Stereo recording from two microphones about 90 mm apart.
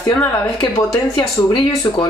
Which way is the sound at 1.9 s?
50° left (ahead or behind).